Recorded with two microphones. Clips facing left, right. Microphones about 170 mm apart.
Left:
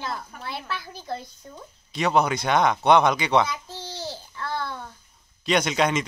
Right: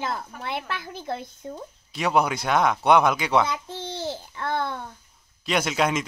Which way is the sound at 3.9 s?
55° right (ahead or behind).